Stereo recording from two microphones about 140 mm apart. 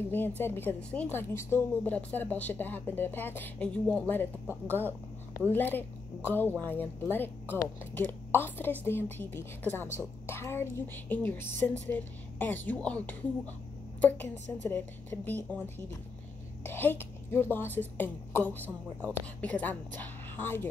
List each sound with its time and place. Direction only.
0.4 s a woman's voice: 15° left (ahead or behind)